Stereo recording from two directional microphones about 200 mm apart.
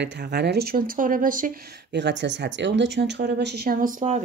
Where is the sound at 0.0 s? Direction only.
55° right (ahead or behind).